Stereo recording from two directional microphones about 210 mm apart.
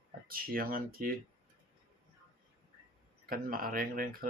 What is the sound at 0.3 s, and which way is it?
Speech, 45° right (ahead or behind).